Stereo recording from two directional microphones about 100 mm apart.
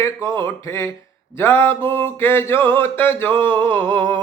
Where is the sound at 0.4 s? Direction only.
30° left (ahead or behind).